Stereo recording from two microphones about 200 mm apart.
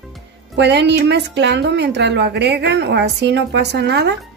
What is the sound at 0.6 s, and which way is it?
A woman's voice, 60° right (ahead or behind).